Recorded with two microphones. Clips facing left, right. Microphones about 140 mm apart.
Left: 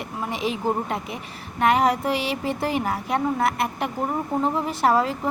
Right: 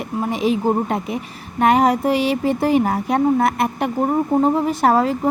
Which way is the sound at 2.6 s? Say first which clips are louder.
Right 9 dB; 45° right (ahead or behind).